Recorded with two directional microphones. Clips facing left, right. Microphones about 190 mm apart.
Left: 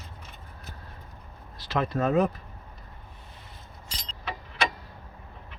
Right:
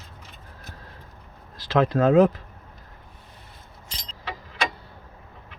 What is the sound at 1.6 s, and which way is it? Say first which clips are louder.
Speech: right 7 dB; 90° right.